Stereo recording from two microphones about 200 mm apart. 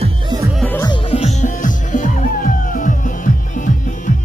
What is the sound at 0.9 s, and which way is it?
Music, 30° left (ahead or behind).